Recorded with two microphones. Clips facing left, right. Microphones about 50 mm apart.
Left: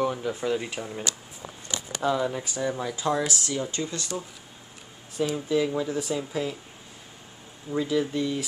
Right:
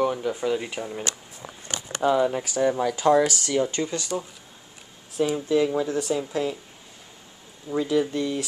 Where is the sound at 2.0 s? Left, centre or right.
Centre.